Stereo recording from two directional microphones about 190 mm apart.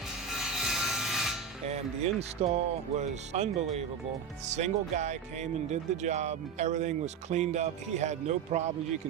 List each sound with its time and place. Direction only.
0.3 s rub: centre (ahead or behind)
1.6 s speech: 35° right (ahead or behind)